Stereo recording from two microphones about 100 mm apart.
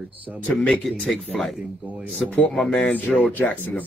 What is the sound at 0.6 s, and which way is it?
Speech, 10° left (ahead or behind).